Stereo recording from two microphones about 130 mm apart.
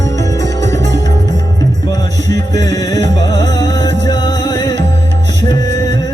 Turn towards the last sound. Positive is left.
turn(degrees=30)  # may be behind; listen again after turning